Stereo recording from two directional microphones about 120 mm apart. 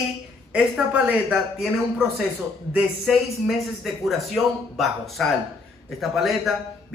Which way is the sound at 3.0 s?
Centre (ahead or behind).